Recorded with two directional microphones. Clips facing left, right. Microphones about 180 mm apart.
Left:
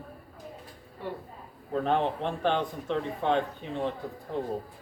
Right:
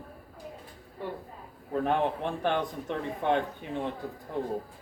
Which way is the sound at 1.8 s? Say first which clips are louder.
Even; 15° right (ahead or behind).